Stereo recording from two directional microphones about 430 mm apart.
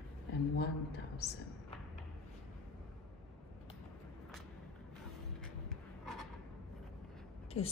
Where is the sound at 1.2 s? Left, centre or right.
Left.